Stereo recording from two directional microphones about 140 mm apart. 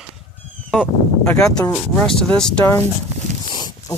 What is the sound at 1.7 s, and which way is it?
Speech, 5° left (ahead or behind).